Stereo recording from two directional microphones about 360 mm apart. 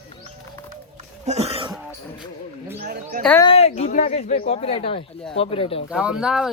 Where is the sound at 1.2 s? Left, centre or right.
Centre.